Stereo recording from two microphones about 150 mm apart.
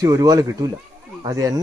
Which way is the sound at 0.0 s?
25° right (ahead or behind).